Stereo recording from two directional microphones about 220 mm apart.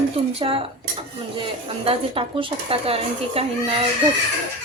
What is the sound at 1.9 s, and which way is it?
A child's voice, 25° right (ahead or behind).